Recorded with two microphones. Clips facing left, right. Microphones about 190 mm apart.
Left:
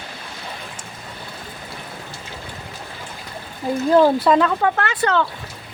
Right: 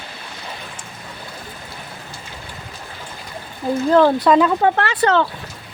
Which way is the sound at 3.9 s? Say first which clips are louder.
Right 1 dB; 10° left (ahead or behind).